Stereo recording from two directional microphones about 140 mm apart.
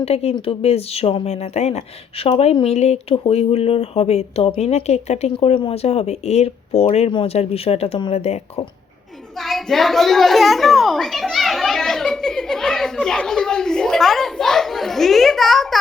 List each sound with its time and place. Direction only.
0.0 s speech: 45° left (ahead or behind)
9.4 s a child's voice: centre (ahead or behind)